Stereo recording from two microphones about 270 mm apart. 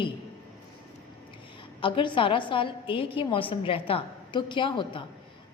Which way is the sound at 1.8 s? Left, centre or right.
Centre.